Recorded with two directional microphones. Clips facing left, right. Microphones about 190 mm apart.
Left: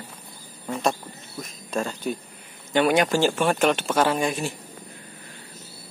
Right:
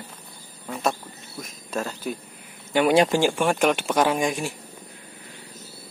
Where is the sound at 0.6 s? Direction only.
Centre (ahead or behind).